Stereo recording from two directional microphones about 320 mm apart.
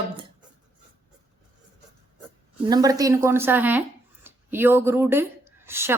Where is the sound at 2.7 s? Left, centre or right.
Centre.